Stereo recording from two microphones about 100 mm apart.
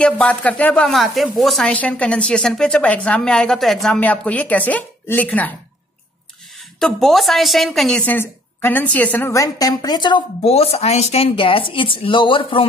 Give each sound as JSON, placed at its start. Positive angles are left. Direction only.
{"t": 0.0, "sound": "a woman's voice", "side_deg": 10}
{"t": 0.9, "sound": "a woman's voice", "side_deg": 0}
{"t": 1.7, "sound": "a woman's voice", "side_deg": 10}
{"t": 4.0, "sound": "a woman's voice", "side_deg": 15}
{"t": 6.8, "sound": "a woman's voice", "side_deg": 0}
{"t": 8.0, "sound": "a woman's voice", "side_deg": 20}
{"t": 9.3, "sound": "a woman's voice", "side_deg": 35}
{"t": 10.4, "sound": "speech", "side_deg": 90}